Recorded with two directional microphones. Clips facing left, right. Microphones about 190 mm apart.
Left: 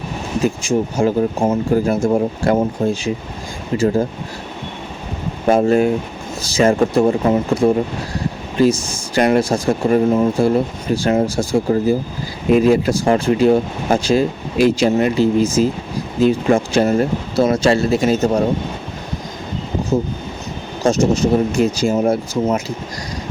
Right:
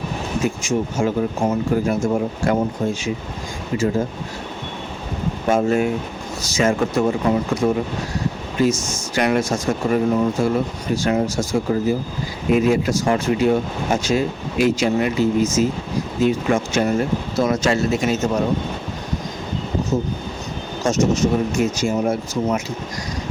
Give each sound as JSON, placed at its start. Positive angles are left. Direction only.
{"t": 0.4, "sound": "speech", "side_deg": 35}
{"t": 5.5, "sound": "speech", "side_deg": 35}
{"t": 20.8, "sound": "speech", "side_deg": 30}